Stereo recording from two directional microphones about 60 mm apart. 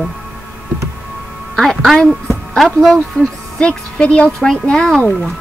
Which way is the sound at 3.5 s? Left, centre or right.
Centre.